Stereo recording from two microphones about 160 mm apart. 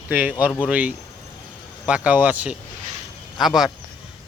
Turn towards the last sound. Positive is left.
turn(degrees=0)  # may be behind; listen again after turning